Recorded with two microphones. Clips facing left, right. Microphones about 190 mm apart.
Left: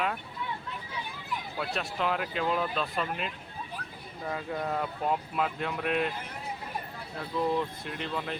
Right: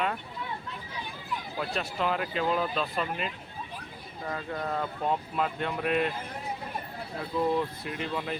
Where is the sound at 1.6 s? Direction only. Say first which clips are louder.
Right 1 dB; centre (ahead or behind).